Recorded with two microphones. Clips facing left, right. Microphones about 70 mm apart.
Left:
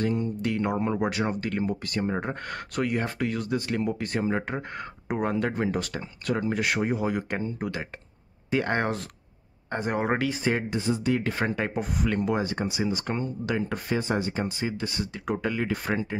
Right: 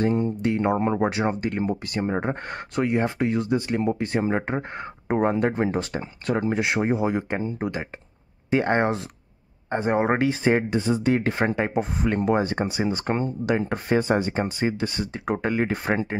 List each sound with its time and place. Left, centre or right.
0.0 s speech: right
10.7 s speech: right
11.3 s speech: right